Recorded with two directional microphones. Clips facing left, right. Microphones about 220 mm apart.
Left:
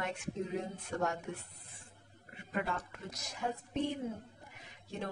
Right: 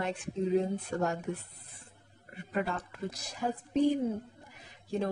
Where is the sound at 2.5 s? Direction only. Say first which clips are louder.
Right 4 dB; 35° right (ahead or behind).